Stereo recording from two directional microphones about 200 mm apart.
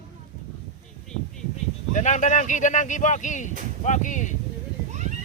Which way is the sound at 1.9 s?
35° left (ahead or behind).